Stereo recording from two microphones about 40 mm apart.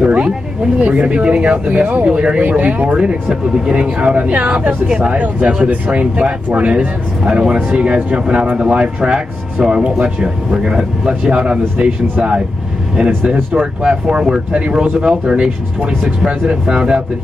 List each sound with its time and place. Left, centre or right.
0.0 s a sound: right
0.7 s speech: right
2.4 s speech: right
3.7 s speech: right
13.6 s speech: centre